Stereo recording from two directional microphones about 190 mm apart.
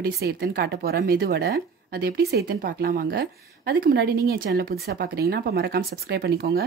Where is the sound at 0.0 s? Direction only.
55° right (ahead or behind).